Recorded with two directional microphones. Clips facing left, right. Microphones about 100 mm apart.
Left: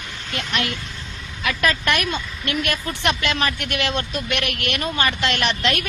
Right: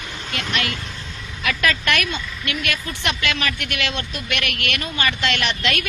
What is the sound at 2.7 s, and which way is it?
Speech, 40° left (ahead or behind).